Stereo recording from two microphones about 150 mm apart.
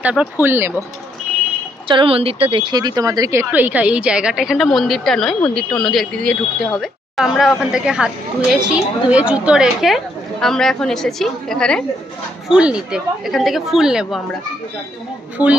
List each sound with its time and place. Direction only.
0.0 s a woman's voice: 10° right (ahead or behind)
1.9 s a woman's voice: 35° right (ahead or behind); by 11.8 s 5° left (ahead or behind)
12.4 s a woman's voice: 5° right (ahead or behind)